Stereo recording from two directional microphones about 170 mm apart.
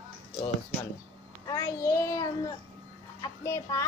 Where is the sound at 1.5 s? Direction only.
20° left (ahead or behind).